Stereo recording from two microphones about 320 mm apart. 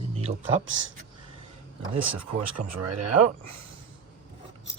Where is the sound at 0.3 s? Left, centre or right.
Right.